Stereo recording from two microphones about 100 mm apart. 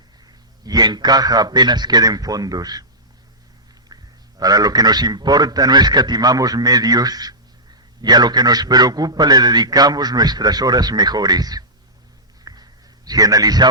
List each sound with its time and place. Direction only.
0.6 s a man's voice: 40° right (ahead or behind)
3.9 s quack: 40° right (ahead or behind)
4.4 s a man's voice: 40° right (ahead or behind)
12.5 s a sound: 40° right (ahead or behind)
13.1 s a man's voice: 40° right (ahead or behind)